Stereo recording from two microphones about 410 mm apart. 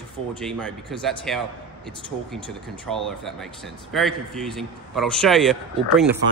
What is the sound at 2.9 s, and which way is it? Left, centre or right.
Speech, centre.